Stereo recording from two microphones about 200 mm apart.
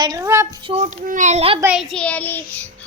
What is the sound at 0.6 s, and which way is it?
Speech, 35° right (ahead or behind).